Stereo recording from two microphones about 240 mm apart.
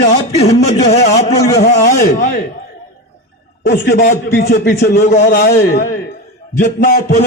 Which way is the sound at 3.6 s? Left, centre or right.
Left.